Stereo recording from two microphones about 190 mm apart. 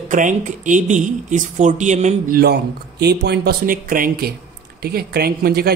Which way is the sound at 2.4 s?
60° right (ahead or behind).